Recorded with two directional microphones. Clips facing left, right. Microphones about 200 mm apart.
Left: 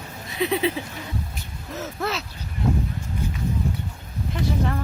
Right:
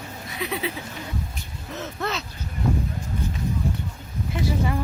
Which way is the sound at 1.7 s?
5° left (ahead or behind).